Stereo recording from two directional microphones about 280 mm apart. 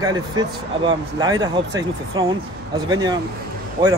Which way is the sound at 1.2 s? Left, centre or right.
Centre.